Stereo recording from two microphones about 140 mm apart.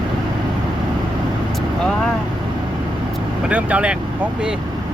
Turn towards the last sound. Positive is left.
turn(degrees=-10)  # may be behind; listen again after turning